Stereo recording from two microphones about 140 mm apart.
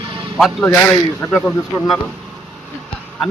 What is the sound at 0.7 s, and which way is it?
Speech, 10° left (ahead or behind).